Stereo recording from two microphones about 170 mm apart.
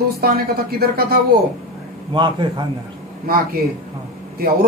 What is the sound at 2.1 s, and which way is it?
Speech, 30° right (ahead or behind).